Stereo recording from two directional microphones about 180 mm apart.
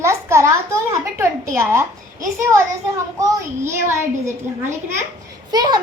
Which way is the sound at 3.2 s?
15° right (ahead or behind).